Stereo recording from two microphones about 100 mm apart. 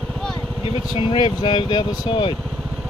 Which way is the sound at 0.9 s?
50° left (ahead or behind).